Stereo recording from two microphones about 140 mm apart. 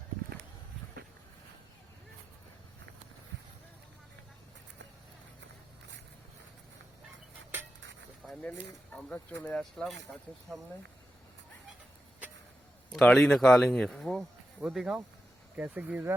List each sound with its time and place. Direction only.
8.4 s speech: 10° left (ahead or behind)
12.9 s speech: 5° left (ahead or behind); by 16.1 s 15° right (ahead or behind)